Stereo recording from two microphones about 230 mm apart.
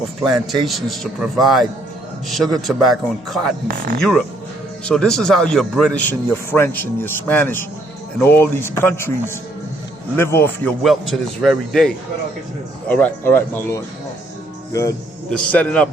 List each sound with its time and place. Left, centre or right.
0.6 s a man's voice: centre
3.7 s speech: right
4.9 s a man's voice: centre